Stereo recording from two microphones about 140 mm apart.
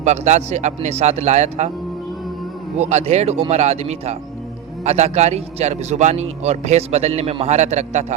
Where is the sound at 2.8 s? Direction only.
55° right (ahead or behind).